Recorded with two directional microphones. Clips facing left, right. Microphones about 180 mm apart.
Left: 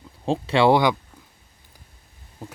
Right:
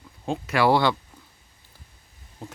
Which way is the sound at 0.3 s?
30° left (ahead or behind).